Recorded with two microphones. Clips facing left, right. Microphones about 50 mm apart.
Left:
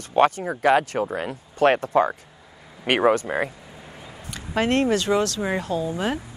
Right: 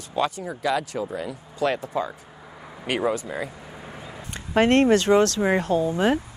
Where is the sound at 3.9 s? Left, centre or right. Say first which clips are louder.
Right 2 dB; centre.